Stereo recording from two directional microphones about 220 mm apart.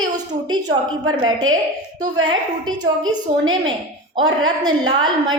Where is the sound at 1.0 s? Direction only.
20° right (ahead or behind).